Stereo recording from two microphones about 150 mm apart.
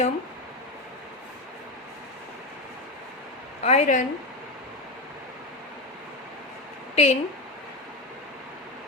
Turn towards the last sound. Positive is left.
turn(degrees=45)  # may be behind; listen again after turning